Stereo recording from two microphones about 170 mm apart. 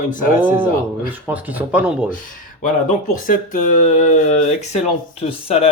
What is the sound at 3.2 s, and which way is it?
Speech, 50° left (ahead or behind).